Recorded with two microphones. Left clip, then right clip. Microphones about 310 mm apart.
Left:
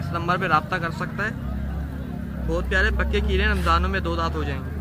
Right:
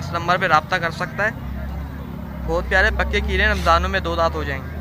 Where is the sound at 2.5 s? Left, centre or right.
Centre.